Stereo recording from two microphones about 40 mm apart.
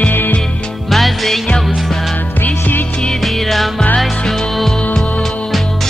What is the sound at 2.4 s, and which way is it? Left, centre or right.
Music, left.